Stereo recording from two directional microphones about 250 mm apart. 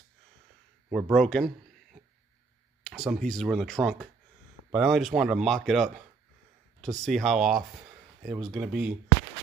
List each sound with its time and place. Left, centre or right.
0.8 s speech: centre